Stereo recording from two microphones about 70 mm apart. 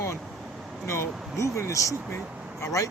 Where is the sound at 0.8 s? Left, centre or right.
Left.